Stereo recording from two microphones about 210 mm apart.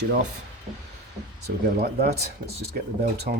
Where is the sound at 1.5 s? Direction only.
50° right (ahead or behind).